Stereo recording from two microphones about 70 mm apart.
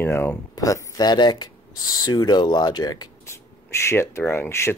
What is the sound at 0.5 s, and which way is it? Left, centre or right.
Speech, left.